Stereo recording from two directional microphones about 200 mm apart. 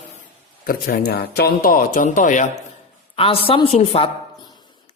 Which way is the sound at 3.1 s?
30° left (ahead or behind).